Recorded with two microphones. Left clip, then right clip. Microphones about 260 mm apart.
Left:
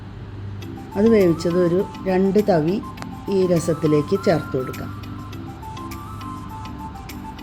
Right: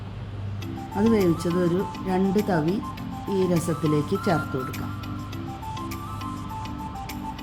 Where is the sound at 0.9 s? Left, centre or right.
Centre.